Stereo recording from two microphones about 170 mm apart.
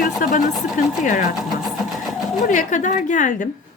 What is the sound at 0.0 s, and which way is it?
Speech, 55° left (ahead or behind).